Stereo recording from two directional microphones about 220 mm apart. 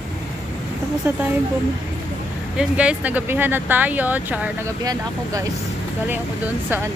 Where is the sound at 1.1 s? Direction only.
10° right (ahead or behind).